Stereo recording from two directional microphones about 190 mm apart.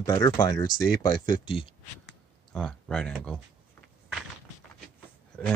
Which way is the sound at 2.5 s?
5° left (ahead or behind).